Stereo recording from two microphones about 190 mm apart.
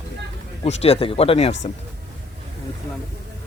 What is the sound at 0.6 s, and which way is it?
Speech, 30° left (ahead or behind).